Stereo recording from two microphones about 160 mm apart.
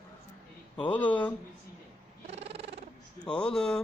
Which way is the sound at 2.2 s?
40° right (ahead or behind).